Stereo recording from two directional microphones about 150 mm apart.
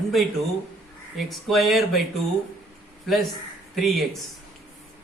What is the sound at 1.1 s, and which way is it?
Speech, centre (ahead or behind).